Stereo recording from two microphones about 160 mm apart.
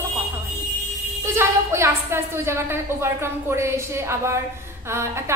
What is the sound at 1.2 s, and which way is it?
A woman's voice, 15° right (ahead or behind).